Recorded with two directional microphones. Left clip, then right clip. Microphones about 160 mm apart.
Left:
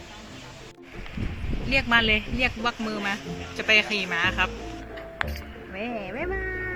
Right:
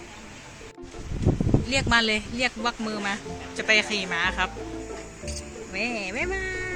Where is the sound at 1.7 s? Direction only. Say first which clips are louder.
Left 2 dB; centre (ahead or behind).